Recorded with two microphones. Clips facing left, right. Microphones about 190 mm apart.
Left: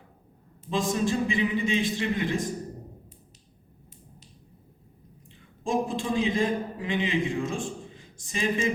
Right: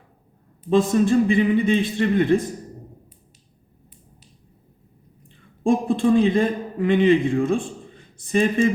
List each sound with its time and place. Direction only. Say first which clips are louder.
0.7 s a man's voice: right 9 dB; 60° right (ahead or behind)
5.6 s a man's voice: right 9 dB; 55° right (ahead or behind)